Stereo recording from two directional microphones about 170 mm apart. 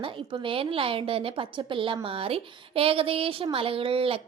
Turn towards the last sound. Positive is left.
turn(degrees=-30)  # may be behind; listen again after turning